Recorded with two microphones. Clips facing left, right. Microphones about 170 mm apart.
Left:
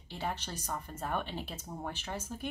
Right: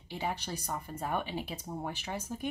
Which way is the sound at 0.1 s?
10° right (ahead or behind).